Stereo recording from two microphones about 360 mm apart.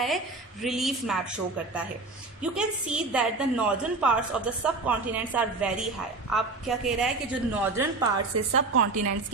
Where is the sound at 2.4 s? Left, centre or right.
Centre.